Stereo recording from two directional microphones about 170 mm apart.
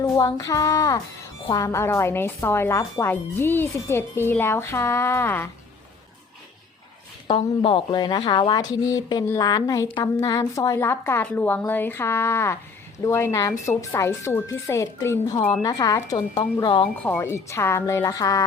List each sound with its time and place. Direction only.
0.0 s a woman's voice: 20° left (ahead or behind)
7.3 s a woman's voice: 30° left (ahead or behind)
17.0 s speech: 10° left (ahead or behind)